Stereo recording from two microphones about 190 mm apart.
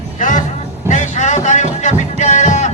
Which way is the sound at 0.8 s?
40° left (ahead or behind).